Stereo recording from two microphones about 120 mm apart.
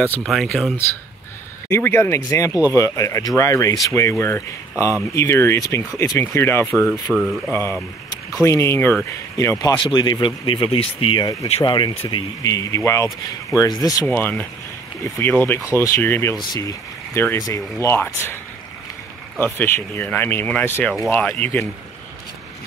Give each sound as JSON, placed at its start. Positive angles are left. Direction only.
{"t": 0.2, "sound": "speech", "side_deg": 0}
{"t": 1.7, "sound": "speech", "side_deg": 20}
{"t": 7.1, "sound": "speech", "side_deg": -5}
{"t": 8.4, "sound": "speech", "side_deg": 25}
{"t": 12.4, "sound": "speech", "side_deg": 30}
{"t": 14.0, "sound": "speech", "side_deg": 15}
{"t": 16.3, "sound": "speech", "side_deg": 35}
{"t": 19.4, "sound": "speech", "side_deg": 15}